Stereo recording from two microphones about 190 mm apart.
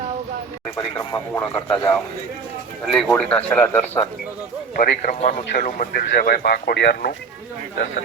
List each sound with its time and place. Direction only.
0.8 s speech: 20° left (ahead or behind)
2.9 s speech: 5° left (ahead or behind)
4.8 s speech: 45° left (ahead or behind)